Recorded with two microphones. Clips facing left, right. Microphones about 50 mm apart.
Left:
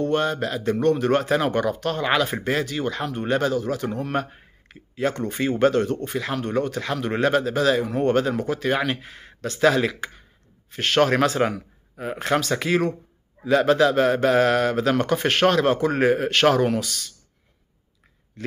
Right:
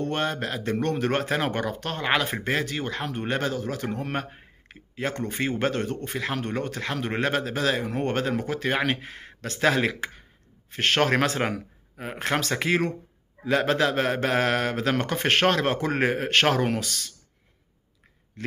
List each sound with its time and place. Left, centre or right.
0.0 s speech: right